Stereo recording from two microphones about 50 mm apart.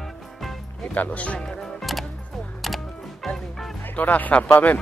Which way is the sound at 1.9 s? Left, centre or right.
Centre.